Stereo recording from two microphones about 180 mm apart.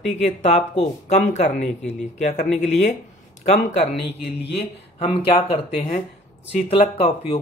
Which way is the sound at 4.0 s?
70° left (ahead or behind).